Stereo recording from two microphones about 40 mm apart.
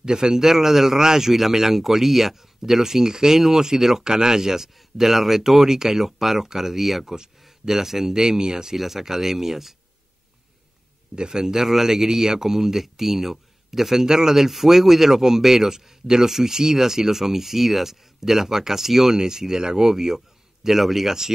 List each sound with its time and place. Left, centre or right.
0.0 s a man's voice: centre
0.4 s speech: centre
11.1 s speech: centre